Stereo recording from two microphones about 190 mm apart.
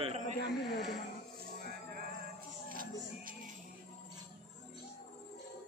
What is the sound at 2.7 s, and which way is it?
Music, 45° right (ahead or behind).